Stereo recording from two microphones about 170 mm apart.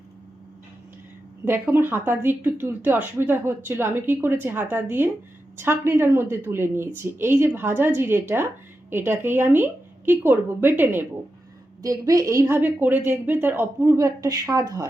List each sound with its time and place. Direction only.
1.5 s a woman's voice: 10° right (ahead or behind)